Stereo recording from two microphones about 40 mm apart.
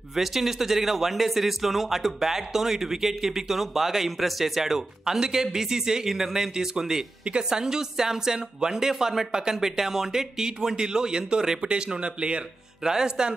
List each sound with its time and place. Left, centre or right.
0.1 s speech: centre